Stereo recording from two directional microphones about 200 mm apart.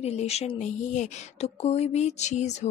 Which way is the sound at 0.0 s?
30° left (ahead or behind).